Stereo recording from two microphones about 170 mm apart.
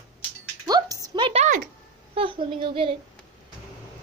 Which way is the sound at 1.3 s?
40° right (ahead or behind).